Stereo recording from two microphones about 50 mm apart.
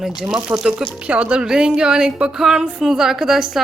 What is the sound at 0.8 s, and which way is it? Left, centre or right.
A woman's voice, right.